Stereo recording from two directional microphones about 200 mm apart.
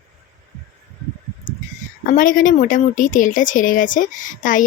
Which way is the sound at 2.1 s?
40° left (ahead or behind).